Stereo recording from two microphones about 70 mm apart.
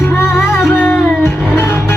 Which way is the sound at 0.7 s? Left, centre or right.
Left.